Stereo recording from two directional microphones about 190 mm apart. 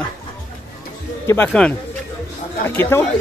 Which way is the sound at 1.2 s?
10° left (ahead or behind).